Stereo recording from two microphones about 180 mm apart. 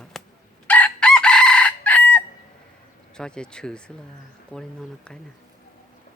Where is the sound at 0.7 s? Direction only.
5° left (ahead or behind).